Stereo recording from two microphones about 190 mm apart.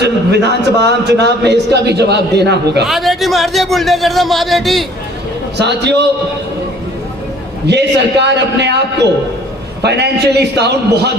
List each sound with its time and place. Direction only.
0.0 s a man's voice: 60° right (ahead or behind)
2.8 s a man's voice: centre (ahead or behind)
5.5 s a man's voice: 65° right (ahead or behind)
7.7 s a man's voice: 65° right (ahead or behind)
9.8 s a man's voice: 60° right (ahead or behind)